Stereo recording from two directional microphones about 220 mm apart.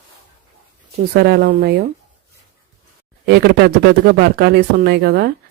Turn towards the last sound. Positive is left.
turn(degrees=-45)  # may be behind; listen again after turning